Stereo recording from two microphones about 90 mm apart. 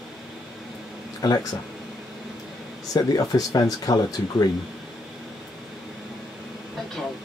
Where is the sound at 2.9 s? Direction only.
45° left (ahead or behind).